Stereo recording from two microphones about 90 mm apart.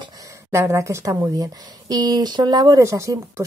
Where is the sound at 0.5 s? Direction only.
30° right (ahead or behind); by 2.8 s 45° right (ahead or behind).